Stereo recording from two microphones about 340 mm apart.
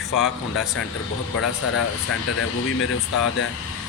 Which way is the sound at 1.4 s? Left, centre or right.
Left.